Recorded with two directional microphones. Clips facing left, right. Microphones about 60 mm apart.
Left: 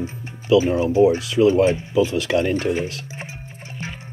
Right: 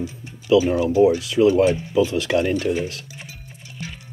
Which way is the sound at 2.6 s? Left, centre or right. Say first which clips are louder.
Even; left.